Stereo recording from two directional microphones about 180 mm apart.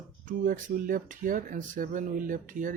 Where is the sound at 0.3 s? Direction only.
45° right (ahead or behind).